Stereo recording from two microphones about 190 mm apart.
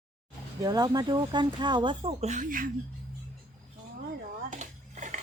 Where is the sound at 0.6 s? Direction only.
20° right (ahead or behind).